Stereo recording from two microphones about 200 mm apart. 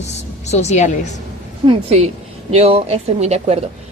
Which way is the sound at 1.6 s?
30° right (ahead or behind).